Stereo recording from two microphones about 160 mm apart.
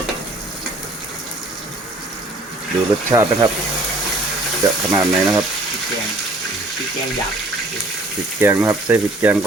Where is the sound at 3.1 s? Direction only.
20° right (ahead or behind).